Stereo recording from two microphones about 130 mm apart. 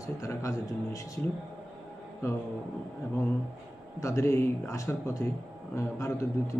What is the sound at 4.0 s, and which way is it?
A man's voice, 25° left (ahead or behind).